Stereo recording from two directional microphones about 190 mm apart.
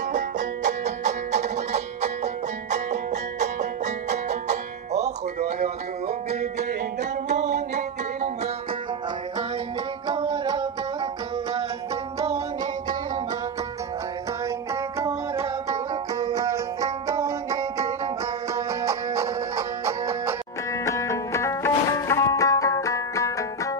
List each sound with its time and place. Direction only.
0.1 s music: 40° right (ahead or behind)
10.0 s music: 25° right (ahead or behind)
14.7 s music: 15° right (ahead or behind)
20.8 s music: 15° left (ahead or behind)